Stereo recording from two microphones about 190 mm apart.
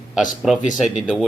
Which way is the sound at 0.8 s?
5° right (ahead or behind).